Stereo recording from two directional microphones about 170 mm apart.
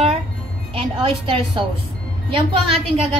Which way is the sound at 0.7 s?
30° right (ahead or behind).